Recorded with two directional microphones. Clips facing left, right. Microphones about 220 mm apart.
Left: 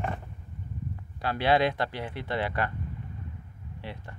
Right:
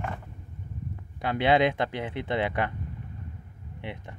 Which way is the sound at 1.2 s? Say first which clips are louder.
Right 2 dB; 20° right (ahead or behind).